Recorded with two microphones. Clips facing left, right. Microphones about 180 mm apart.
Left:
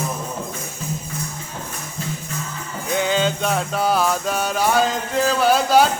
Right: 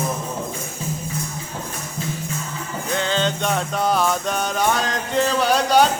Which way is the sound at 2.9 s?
10° left (ahead or behind).